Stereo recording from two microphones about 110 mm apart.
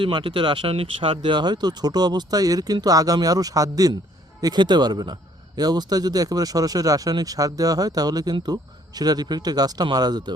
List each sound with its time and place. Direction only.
0.0 s speech: 50° right (ahead or behind)